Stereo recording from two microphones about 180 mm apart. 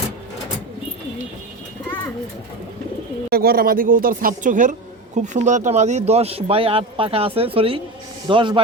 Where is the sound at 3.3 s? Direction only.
60° right (ahead or behind).